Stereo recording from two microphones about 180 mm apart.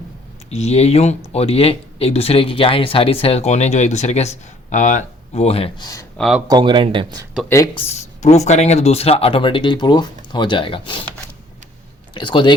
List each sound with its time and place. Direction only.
0.5 s speech: 35° left (ahead or behind)
5.8 s speech: 20° left (ahead or behind)
6.1 s speech: centre (ahead or behind)
6.5 s speech: 25° right (ahead or behind)
7.8 s speech: 35° left (ahead or behind)
12.1 s speech: 25° left (ahead or behind)